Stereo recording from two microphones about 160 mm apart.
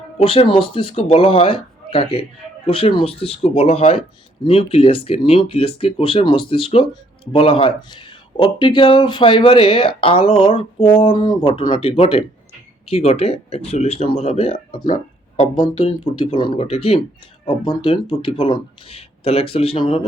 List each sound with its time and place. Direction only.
0.2 s speech: 35° left (ahead or behind)
14.8 s music: 55° left (ahead or behind)
15.6 s speech: 35° left (ahead or behind)